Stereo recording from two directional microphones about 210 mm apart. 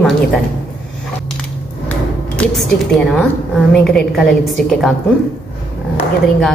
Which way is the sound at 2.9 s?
5° left (ahead or behind).